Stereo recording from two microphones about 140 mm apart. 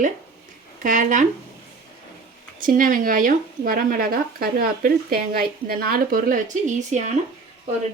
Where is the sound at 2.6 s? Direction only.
75° right (ahead or behind); by 7.1 s 60° right (ahead or behind).